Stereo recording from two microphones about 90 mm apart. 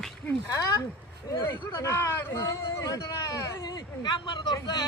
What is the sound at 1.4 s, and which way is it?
Speech, 25° left (ahead or behind).